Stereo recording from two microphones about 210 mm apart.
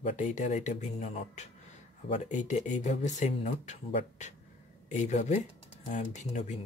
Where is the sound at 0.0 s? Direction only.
35° left (ahead or behind).